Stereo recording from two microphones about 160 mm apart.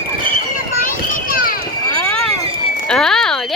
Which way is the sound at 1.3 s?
65° left (ahead or behind).